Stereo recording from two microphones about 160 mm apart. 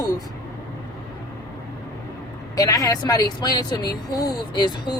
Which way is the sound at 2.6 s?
20° left (ahead or behind).